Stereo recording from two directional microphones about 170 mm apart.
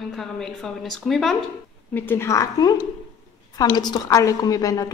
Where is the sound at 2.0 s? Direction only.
15° left (ahead or behind).